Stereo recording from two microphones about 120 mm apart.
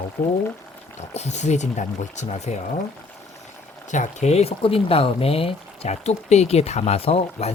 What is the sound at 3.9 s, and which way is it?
Speech, 80° left.